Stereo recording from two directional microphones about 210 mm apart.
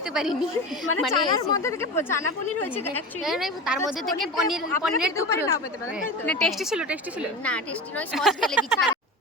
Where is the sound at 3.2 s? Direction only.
Centre (ahead or behind).